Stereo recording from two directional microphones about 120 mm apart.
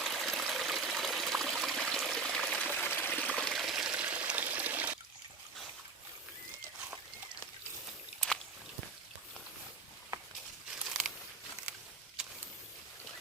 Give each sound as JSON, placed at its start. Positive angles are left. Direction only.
{"t": 0.0, "sound": "trickle", "side_deg": 0}
{"t": 2.6, "sound": "stream", "side_deg": 15}
{"t": 3.3, "sound": "water", "side_deg": 5}
{"t": 10.8, "sound": "a sound", "side_deg": -5}